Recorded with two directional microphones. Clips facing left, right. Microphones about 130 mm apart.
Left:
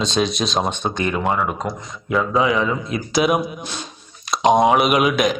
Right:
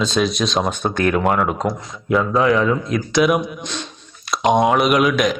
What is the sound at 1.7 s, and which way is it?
Speech, centre (ahead or behind).